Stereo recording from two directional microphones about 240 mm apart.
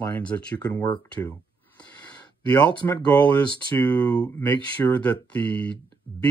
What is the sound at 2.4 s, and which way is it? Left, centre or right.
Speech, centre.